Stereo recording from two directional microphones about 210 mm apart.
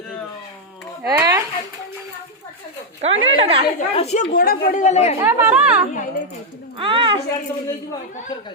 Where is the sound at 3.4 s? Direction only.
25° right (ahead or behind).